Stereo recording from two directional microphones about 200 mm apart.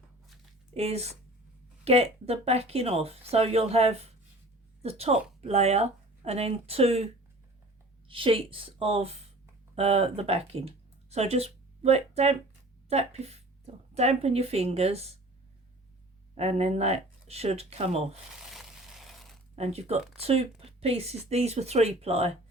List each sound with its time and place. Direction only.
0.7 s a woman's voice: 30° right (ahead or behind)
16.4 s speech: 30° right (ahead or behind)
18.3 s a sound: centre (ahead or behind)
19.5 s speech: 30° right (ahead or behind)